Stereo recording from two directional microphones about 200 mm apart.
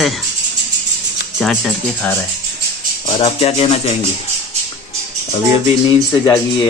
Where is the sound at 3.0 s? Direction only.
30° left (ahead or behind).